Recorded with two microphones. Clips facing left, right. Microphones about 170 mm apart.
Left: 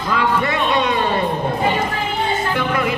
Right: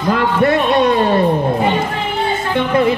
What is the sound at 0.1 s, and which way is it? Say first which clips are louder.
Speech: right 5 dB; 55° right (ahead or behind).